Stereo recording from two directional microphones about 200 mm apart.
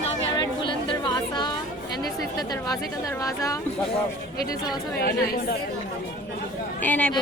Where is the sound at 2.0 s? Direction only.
20° left (ahead or behind).